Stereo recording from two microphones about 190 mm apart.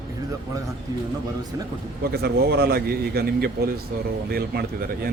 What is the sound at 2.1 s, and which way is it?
A man's voice, 55° right (ahead or behind).